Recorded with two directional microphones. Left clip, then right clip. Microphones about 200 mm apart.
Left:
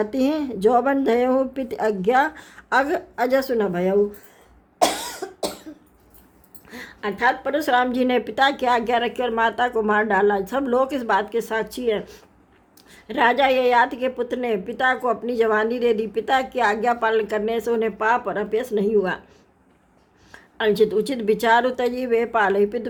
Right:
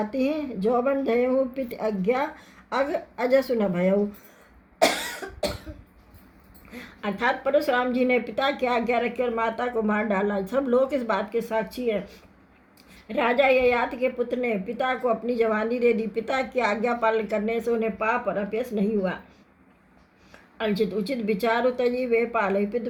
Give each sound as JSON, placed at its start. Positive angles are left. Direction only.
{"t": 0.1, "sound": "a woman's voice", "side_deg": 50}
{"t": 6.7, "sound": "a woman's voice", "side_deg": 30}
{"t": 20.3, "sound": "a woman's voice", "side_deg": 40}